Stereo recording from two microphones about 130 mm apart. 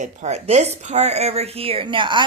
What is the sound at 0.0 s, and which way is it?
Speech, 60° right (ahead or behind).